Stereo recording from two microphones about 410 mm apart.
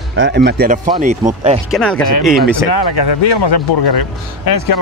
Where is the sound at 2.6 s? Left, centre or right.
Left.